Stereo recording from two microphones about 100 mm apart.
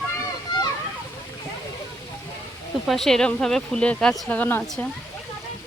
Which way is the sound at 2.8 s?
Centre (ahead or behind).